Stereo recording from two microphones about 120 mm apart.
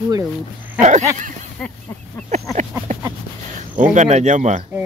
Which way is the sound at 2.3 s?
75° right (ahead or behind).